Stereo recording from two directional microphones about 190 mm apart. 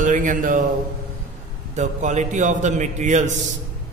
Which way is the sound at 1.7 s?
40° right (ahead or behind).